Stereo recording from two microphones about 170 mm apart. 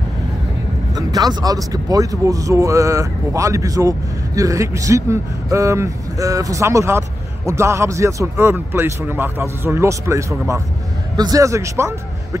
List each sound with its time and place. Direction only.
0.9 s a man's voice: 20° right (ahead or behind)